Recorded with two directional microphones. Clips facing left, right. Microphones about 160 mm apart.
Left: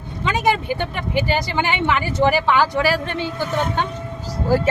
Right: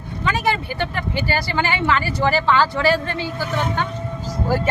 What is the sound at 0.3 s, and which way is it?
Speech, 20° left (ahead or behind).